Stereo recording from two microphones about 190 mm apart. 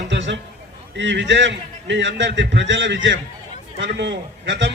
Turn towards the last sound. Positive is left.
turn(degrees=-65)  # may be behind; listen again after turning